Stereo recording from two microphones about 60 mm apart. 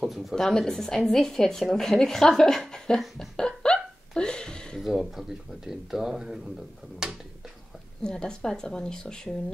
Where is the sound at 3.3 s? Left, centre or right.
Centre.